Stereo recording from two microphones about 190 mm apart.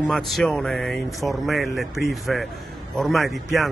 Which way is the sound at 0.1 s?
Centre (ahead or behind).